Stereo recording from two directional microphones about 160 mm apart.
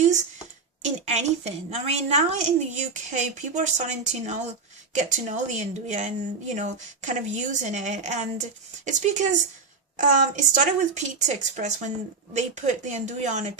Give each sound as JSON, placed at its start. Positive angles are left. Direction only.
{"t": 0.9, "sound": "a woman's voice", "side_deg": -45}